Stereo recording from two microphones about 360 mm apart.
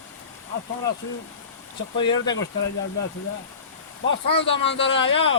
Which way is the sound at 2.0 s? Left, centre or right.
Centre.